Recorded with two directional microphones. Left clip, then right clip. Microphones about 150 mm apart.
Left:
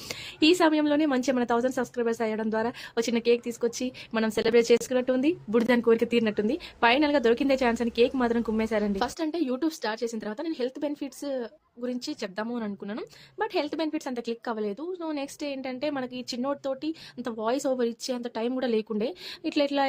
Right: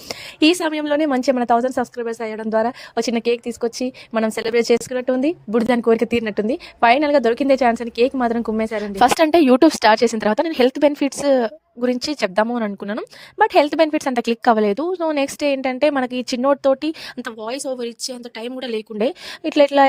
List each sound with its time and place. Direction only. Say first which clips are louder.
0.1 s a woman's voice: right 6 dB; 55° right (ahead or behind); by 8.9 s 35° right (ahead or behind)
9.0 s a woman's voice: right 16 dB; 70° right (ahead or behind); by 19.8 s 50° right (ahead or behind)